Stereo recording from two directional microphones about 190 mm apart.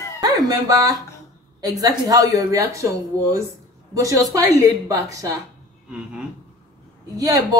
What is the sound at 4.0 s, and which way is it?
Speech, 15° right (ahead or behind).